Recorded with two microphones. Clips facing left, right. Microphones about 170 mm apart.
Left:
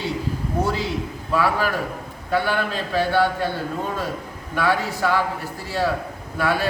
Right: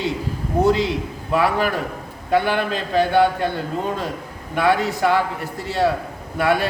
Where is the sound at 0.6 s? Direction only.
20° right (ahead or behind).